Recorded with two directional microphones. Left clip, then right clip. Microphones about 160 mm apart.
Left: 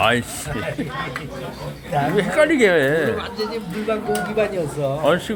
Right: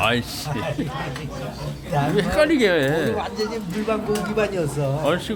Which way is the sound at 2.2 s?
Centre (ahead or behind).